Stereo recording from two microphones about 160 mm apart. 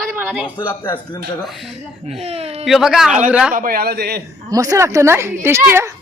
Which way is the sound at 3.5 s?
60° right (ahead or behind).